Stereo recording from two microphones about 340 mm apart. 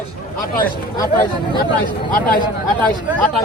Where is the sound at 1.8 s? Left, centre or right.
Centre.